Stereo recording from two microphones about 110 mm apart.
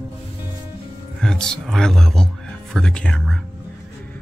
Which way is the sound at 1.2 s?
5° left (ahead or behind).